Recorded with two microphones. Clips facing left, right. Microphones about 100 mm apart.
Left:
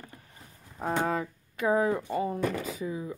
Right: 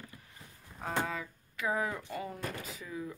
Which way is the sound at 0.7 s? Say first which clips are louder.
Left 7 dB; 40° left (ahead or behind).